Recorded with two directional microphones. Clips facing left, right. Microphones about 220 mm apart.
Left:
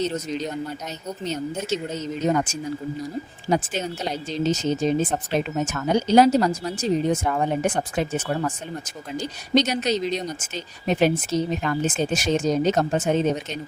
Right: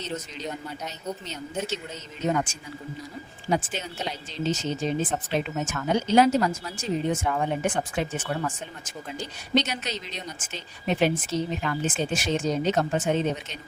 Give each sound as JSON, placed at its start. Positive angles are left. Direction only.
{"t": 1.3, "sound": "speech", "side_deg": 40}